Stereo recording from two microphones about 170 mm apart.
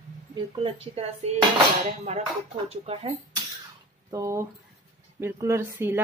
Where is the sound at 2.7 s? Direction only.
35° right (ahead or behind).